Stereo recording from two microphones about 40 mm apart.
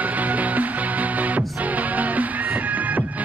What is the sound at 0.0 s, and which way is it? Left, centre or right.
Music, right.